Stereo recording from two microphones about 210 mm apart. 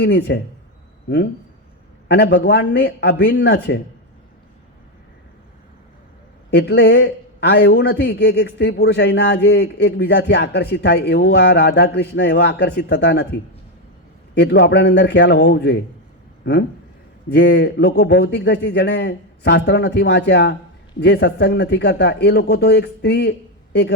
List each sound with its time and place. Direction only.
0.0 s a man's voice: 55° left (ahead or behind)
2.0 s a man's voice: 55° left (ahead or behind)
6.5 s a man's voice: 55° left (ahead or behind)
14.3 s a man's voice: 55° left (ahead or behind)